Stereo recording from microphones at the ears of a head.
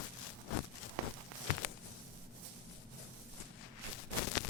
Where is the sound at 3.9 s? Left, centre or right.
Left.